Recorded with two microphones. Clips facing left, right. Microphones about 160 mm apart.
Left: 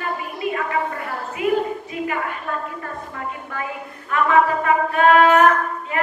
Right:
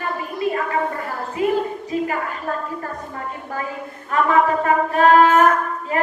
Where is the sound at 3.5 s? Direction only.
35° right (ahead or behind).